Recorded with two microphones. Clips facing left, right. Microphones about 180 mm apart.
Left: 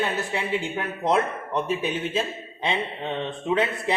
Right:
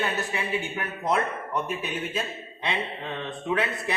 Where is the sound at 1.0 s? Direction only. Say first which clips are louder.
Left 3 dB; 25° left (ahead or behind).